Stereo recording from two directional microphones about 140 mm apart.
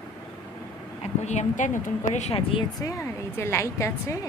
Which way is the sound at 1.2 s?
55° left (ahead or behind).